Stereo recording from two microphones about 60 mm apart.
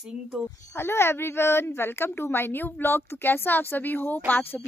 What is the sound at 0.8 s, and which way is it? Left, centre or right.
A woman's voice, left.